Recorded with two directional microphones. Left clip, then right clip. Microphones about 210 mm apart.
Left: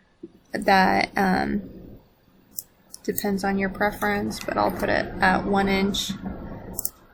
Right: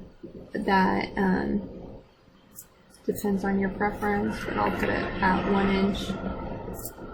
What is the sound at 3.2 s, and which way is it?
Speech, 10° left (ahead or behind).